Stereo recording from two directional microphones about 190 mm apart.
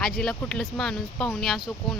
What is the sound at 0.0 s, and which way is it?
Speech, centre (ahead or behind).